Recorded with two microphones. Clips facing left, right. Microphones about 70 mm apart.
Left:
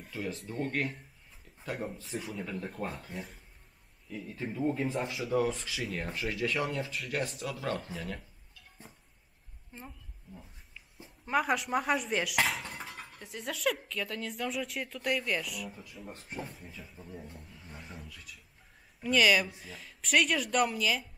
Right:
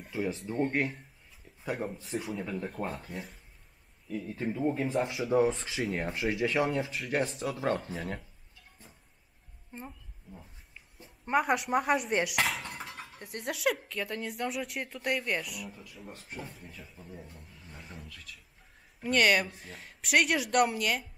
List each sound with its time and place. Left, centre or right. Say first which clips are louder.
0.1 s speech: right 5 dB; right
1.6 s speech: right 3 dB; centre
4.1 s speech: right 4 dB; centre
5.0 s speech: right 5 dB; centre
10.3 s speech: even; centre